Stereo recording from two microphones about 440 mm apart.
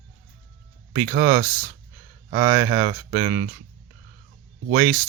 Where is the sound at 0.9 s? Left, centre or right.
Centre.